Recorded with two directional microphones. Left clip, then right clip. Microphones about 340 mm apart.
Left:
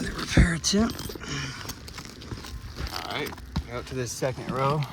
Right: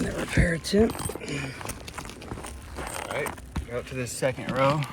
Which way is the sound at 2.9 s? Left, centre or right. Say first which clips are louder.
Right 1 dB; centre.